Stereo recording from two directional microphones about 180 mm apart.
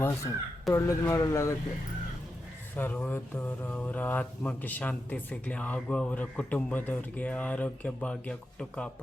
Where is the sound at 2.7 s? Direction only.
10° left (ahead or behind).